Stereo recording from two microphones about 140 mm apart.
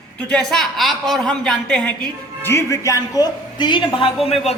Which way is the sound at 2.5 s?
20° left (ahead or behind).